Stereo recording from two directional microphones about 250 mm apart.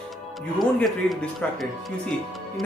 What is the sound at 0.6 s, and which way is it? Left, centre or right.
Speech, centre.